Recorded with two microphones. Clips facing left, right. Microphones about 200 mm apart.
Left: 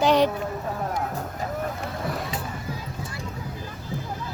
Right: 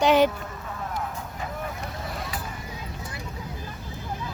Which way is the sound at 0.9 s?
55° left (ahead or behind).